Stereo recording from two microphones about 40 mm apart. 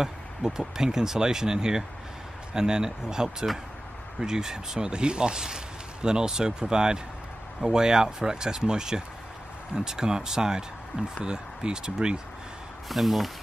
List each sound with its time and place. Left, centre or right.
0.0 s speech: centre
12.8 s speech: centre